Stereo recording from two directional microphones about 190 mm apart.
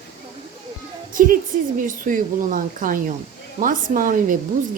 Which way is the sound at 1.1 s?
45° right (ahead or behind).